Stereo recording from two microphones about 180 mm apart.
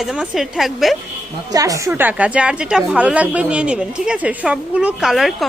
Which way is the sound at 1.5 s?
20° right (ahead or behind).